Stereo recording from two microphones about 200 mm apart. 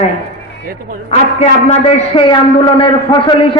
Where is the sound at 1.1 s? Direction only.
35° left (ahead or behind).